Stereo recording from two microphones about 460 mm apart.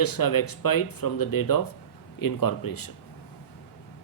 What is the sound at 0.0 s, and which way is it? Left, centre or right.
Speech, left.